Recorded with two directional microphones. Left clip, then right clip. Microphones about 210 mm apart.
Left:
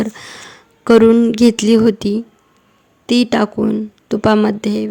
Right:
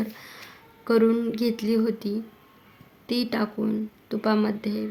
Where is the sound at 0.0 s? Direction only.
45° left (ahead or behind).